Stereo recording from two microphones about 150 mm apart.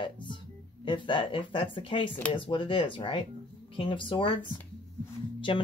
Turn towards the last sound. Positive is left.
turn(degrees=35)  # may be behind; listen again after turning